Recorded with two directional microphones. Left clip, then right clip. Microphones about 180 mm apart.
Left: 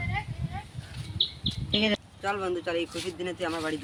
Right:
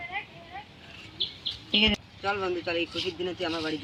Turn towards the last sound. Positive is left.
turn(degrees=15)  # may be behind; listen again after turning